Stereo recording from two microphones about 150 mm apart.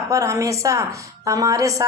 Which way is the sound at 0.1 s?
20° right (ahead or behind).